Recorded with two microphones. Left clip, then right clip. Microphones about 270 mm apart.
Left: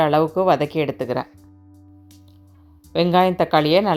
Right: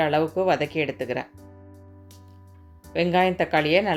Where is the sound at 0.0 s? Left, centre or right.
Left.